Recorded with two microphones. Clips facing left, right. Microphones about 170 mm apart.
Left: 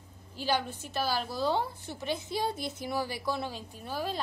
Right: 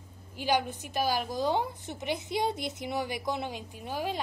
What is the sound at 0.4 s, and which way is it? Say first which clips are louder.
A woman's voice: right 2 dB; 15° right (ahead or behind).